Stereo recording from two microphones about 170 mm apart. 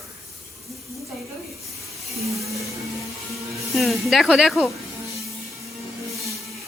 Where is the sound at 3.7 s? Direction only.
Centre (ahead or behind).